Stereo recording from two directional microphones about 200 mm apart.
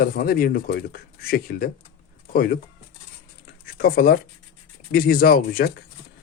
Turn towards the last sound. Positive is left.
turn(degrees=45)  # may be behind; listen again after turning